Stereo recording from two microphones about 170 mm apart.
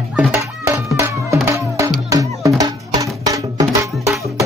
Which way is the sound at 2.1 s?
20° right (ahead or behind).